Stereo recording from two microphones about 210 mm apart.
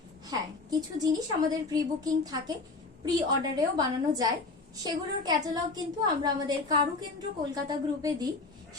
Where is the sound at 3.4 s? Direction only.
20° right (ahead or behind).